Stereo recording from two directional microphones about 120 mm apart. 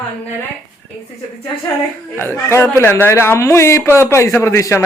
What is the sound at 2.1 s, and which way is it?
A man's voice, 20° left (ahead or behind).